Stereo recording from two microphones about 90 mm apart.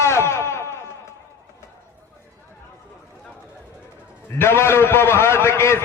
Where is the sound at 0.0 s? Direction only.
30° left (ahead or behind).